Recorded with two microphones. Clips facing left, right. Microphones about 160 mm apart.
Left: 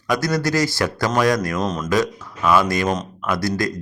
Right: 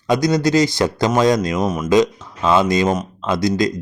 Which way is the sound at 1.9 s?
20° right (ahead or behind).